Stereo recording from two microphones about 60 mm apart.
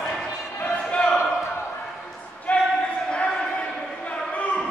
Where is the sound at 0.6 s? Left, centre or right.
Left.